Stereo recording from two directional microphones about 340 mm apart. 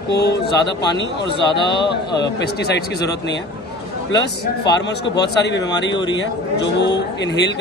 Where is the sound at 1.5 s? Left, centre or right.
Centre.